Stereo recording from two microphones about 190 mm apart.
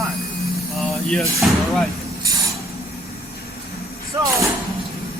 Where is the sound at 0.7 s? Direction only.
Centre (ahead or behind).